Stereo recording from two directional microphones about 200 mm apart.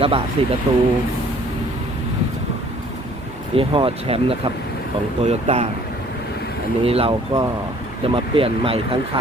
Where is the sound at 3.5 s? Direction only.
25° right (ahead or behind).